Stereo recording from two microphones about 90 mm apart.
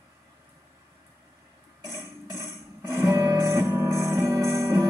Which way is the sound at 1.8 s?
30° right (ahead or behind).